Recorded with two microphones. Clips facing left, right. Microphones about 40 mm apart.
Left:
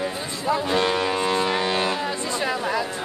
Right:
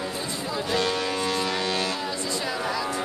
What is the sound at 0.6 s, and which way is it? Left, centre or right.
Foghorn, left.